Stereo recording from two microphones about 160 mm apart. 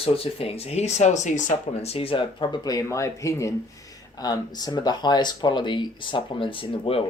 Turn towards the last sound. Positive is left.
turn(degrees=35)  # may be behind; listen again after turning